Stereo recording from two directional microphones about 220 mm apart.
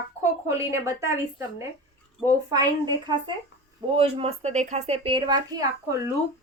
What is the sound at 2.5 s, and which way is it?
Speech, 15° right (ahead or behind).